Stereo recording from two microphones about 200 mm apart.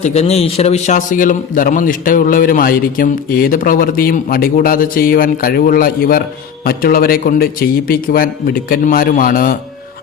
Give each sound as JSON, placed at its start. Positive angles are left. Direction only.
{"t": 0.0, "sound": "a man's voice", "side_deg": 35}